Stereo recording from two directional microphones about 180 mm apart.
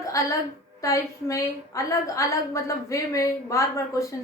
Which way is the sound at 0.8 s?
15° left (ahead or behind).